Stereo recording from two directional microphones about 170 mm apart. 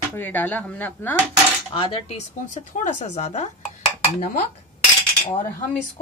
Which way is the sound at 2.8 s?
45° left (ahead or behind).